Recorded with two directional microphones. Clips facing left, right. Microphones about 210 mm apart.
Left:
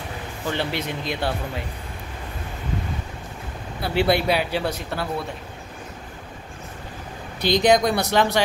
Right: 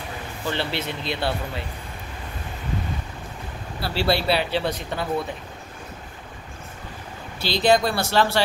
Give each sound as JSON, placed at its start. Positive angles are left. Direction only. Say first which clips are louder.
{"t": 0.5, "sound": "speech", "louder": "left 1 dB", "side_deg": 15}
{"t": 3.8, "sound": "speech", "louder": "left 2 dB", "side_deg": 20}
{"t": 7.4, "sound": "speech", "louder": "left 2 dB", "side_deg": 15}